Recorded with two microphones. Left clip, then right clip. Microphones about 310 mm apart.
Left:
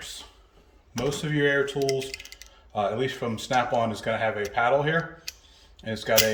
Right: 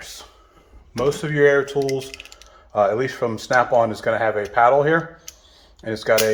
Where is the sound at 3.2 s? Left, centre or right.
Right.